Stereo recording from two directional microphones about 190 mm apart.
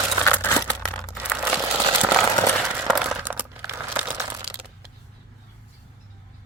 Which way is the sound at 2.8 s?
Centre (ahead or behind).